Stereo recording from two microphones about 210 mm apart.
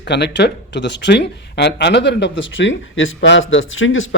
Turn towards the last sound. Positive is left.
turn(degrees=70)  # may be behind; listen again after turning